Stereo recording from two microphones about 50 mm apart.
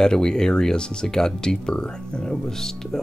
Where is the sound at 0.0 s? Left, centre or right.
Centre.